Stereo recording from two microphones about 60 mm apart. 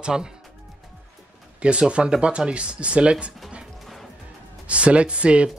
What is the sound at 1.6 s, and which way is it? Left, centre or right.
Speech, centre.